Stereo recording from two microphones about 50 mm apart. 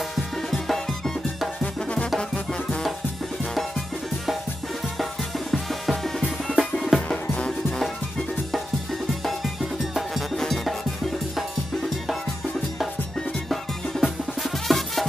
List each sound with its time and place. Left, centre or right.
0.1 s music: centre
1.6 s music: left
5.5 s music: centre
6.9 s music: centre
9.2 s music: centre
14.0 s music: centre